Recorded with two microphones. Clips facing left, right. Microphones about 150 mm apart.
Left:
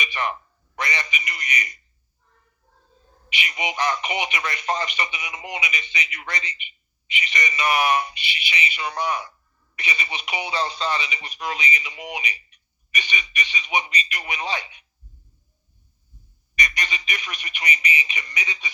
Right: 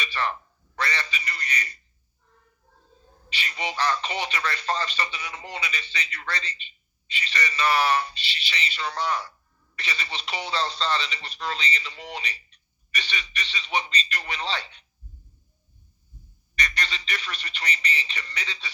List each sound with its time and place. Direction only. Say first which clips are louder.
0.0 s a man's voice: left 1 dB; 15° left (ahead or behind)
3.2 s speech: left 3 dB; 15° left (ahead or behind)
16.6 s speech: left 2 dB; 15° left (ahead or behind)